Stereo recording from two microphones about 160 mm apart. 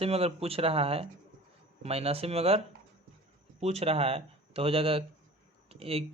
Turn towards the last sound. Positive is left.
turn(degrees=-40)  # may be behind; listen again after turning